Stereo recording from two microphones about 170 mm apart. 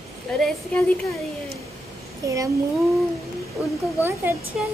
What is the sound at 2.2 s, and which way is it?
Speech, 20° right (ahead or behind).